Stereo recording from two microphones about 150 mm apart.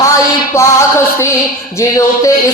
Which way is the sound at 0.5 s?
20° left (ahead or behind).